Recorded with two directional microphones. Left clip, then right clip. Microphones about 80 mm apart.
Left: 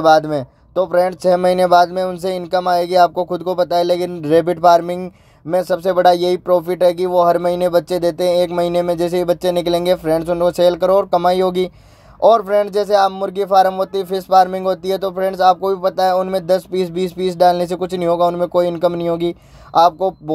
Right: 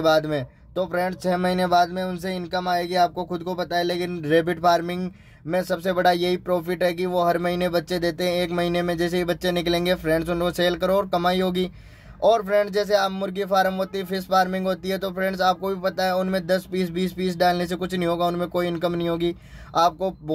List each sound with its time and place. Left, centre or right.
0.0 s a man's voice: left
0.9 s speech: left
4.2 s speech: left
5.0 s speech: left